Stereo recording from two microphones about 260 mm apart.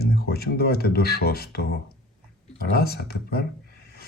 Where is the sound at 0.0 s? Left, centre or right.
Left.